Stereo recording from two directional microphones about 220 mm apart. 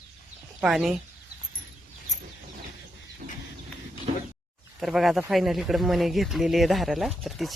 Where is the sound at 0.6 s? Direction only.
Centre (ahead or behind).